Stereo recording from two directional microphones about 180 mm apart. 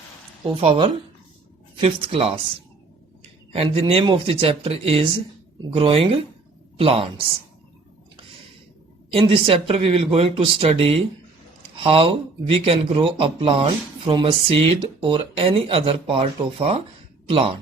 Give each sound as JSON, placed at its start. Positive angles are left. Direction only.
{"t": 0.5, "sound": "speech", "side_deg": -30}
{"t": 3.5, "sound": "speech", "side_deg": -30}
{"t": 9.1, "sound": "speech", "side_deg": -30}